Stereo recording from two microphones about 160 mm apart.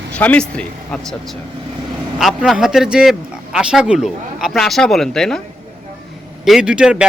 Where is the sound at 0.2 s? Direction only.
10° left (ahead or behind).